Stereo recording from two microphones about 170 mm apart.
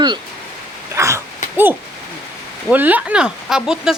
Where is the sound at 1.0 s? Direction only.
15° right (ahead or behind).